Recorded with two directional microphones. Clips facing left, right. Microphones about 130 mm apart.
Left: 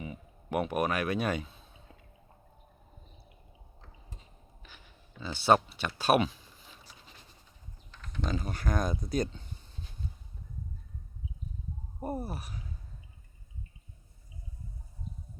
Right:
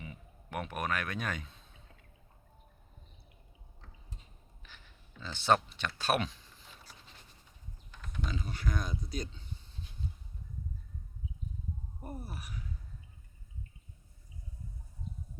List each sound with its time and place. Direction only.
0.0 s speech: 10° left (ahead or behind)
5.2 s speech: 10° left (ahead or behind)
7.9 s typing: 5° right (ahead or behind)
8.3 s speech: 45° left (ahead or behind)
12.2 s speech: 30° left (ahead or behind)